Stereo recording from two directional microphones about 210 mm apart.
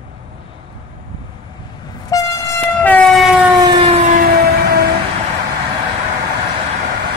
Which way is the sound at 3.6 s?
25° right (ahead or behind).